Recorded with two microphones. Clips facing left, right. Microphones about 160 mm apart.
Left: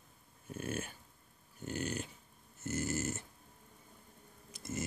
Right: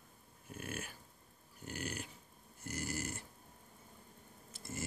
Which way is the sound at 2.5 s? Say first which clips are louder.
Left 5 dB; 25° left (ahead or behind).